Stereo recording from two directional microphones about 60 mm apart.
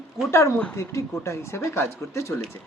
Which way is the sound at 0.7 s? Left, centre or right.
Left.